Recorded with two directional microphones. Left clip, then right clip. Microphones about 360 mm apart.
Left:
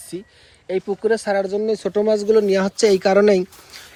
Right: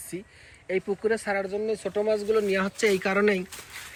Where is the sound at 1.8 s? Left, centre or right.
Left.